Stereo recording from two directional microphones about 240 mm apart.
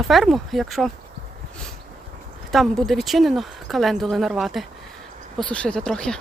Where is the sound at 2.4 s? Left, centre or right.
Centre.